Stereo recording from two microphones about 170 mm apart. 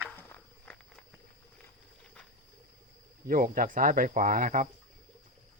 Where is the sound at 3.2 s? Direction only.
55° right (ahead or behind).